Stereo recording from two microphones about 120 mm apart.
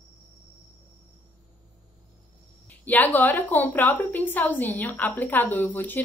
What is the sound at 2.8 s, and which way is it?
A woman's voice, 15° left (ahead or behind).